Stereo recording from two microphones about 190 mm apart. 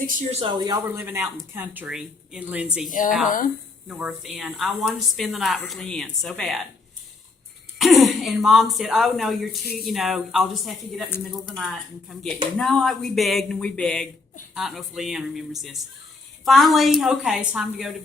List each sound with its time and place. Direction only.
0.3 s speech: 30° right (ahead or behind); by 2.6 s 5° right (ahead or behind)
2.9 s a woman's voice: 45° left (ahead or behind)
3.8 s speech: 5° right (ahead or behind)
7.8 s speech: centre (ahead or behind)